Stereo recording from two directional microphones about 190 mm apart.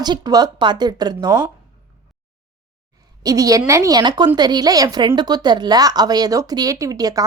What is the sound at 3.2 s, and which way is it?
A woman's voice, 20° right (ahead or behind).